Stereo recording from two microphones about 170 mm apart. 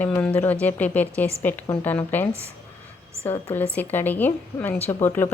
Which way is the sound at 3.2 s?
10° left (ahead or behind).